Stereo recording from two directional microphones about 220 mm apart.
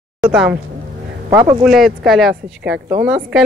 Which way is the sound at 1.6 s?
Centre (ahead or behind).